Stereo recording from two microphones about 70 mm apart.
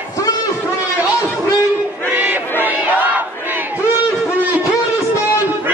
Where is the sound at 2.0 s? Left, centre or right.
Right.